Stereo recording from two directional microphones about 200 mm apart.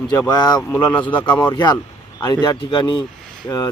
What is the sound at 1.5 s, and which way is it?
Speech, 20° left (ahead or behind).